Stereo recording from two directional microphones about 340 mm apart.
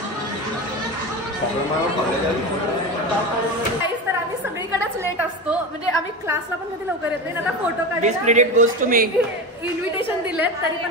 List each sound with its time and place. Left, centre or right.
8.0 s a woman's voice: right